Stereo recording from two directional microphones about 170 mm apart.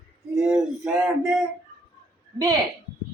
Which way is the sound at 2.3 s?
20° right (ahead or behind).